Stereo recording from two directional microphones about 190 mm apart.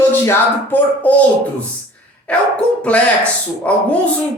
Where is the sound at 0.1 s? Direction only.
10° left (ahead or behind).